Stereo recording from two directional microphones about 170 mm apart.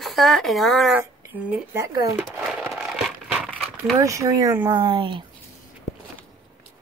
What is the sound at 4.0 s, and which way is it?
Speech, 20° right (ahead or behind).